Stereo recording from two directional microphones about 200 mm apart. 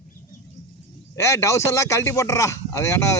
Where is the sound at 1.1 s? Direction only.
15° left (ahead or behind).